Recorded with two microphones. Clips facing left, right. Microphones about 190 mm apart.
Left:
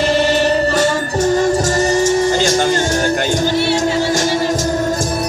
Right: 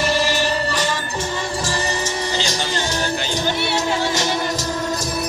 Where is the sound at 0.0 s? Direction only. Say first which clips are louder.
Left 6 dB; 30° left (ahead or behind).